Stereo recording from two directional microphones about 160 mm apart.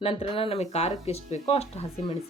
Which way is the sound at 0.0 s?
35° left (ahead or behind).